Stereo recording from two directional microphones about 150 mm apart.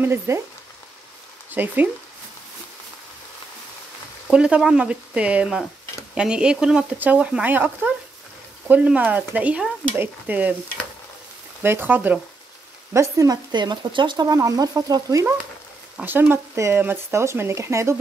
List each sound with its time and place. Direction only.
0.0 s speech: 15° right (ahead or behind)
1.5 s speech: 10° right (ahead or behind)
4.3 s speech: 5° right (ahead or behind)
11.6 s speech: 15° right (ahead or behind)